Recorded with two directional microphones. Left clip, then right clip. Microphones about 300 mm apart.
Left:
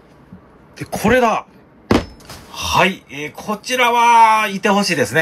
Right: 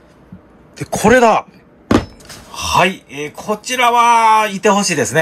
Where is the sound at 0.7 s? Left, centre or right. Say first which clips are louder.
Right 4 dB; centre.